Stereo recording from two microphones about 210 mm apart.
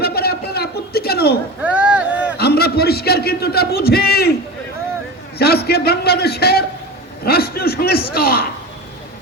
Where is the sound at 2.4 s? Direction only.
50° left (ahead or behind).